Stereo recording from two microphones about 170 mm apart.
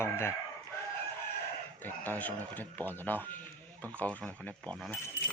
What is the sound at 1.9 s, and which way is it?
Speech, 10° left (ahead or behind).